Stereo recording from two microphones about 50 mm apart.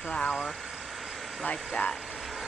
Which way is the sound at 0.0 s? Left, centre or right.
Centre.